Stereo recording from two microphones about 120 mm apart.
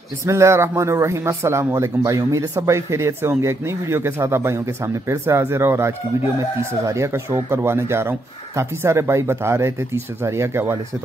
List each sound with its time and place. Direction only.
0.2 s speech: 25° right (ahead or behind)